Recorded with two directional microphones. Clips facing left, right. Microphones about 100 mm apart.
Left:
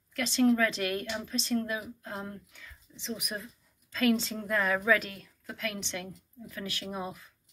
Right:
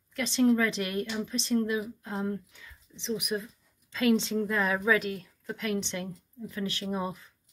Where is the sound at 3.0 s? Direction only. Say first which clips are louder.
Right 6 dB; 20° right (ahead or behind).